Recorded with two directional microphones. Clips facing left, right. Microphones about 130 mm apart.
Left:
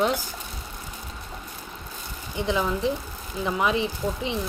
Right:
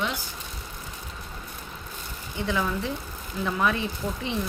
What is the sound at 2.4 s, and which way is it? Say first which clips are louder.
Speech: left 3 dB; 20° left (ahead or behind).